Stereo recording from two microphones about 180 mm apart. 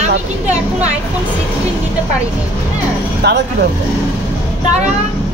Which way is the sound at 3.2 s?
70° right (ahead or behind).